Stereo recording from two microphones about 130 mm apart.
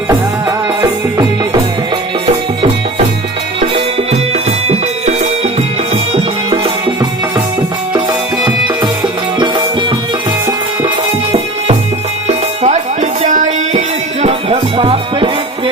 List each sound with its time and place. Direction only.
0.1 s music: 25° right (ahead or behind)
4.7 s music: 60° right (ahead or behind)
8.4 s music: 35° right (ahead or behind)
10.4 s music: 35° right (ahead or behind)
12.6 s music: 65° right (ahead or behind)
14.5 s music: 40° right (ahead or behind)